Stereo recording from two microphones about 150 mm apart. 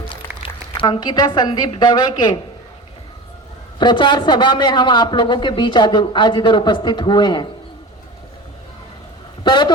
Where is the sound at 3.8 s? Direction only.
30° left (ahead or behind).